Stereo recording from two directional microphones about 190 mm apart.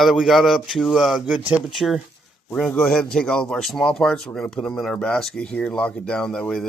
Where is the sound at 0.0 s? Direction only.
Centre (ahead or behind).